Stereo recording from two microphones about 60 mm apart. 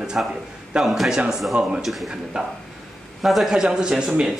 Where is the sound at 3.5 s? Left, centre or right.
Centre.